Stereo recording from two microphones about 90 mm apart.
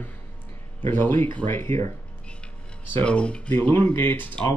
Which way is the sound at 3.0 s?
10° left (ahead or behind).